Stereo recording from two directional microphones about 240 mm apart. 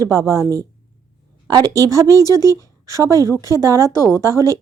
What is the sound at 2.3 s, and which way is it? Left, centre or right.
Speech, centre.